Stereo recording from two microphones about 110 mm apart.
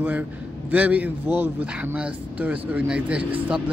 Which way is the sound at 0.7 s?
15° right (ahead or behind).